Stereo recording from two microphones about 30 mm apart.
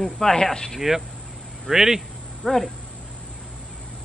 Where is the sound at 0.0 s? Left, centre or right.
Left.